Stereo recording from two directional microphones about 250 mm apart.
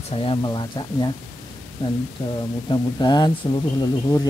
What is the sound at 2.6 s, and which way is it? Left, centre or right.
Speech, centre.